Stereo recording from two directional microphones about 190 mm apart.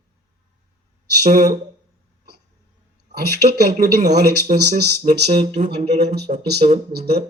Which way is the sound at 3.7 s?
45° right (ahead or behind).